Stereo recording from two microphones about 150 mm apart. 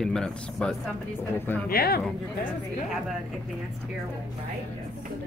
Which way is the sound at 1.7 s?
90° left.